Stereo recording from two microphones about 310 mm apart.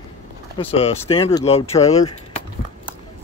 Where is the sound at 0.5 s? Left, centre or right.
Centre.